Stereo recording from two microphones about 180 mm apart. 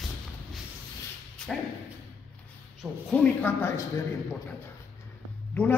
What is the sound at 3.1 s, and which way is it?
Speech, 10° left (ahead or behind).